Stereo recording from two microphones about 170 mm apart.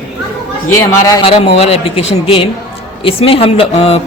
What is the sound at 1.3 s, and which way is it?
A man's voice, 35° left (ahead or behind).